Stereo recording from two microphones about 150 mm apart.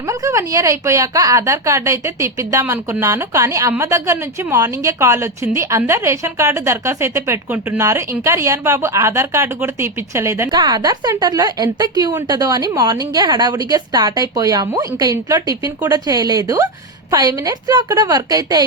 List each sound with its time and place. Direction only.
0.1 s a woman's voice: 20° right (ahead or behind)